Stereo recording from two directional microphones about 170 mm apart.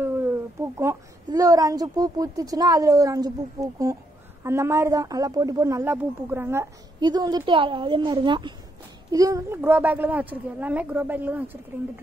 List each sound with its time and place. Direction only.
0.7 s a woman's voice: 20° right (ahead or behind)